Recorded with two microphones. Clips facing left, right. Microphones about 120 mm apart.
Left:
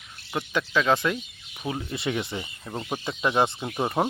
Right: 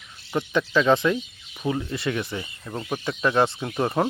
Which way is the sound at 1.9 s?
20° left (ahead or behind).